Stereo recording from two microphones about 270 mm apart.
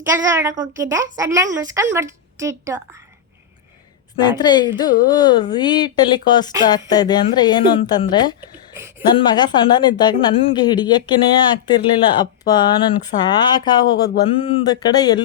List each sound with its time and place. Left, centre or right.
0.1 s a woman's voice: centre
4.4 s speech: centre
8.4 s a sound: centre
9.0 s speech: centre